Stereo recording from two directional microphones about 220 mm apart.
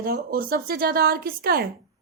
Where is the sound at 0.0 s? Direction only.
40° right (ahead or behind).